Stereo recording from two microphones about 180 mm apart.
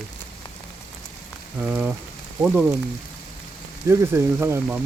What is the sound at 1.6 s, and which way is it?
Speech, 10° right (ahead or behind).